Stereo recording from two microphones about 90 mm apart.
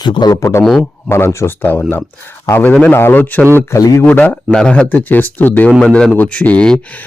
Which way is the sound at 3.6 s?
30° left (ahead or behind).